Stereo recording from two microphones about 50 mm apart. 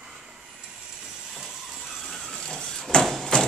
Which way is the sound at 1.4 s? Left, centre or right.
Centre.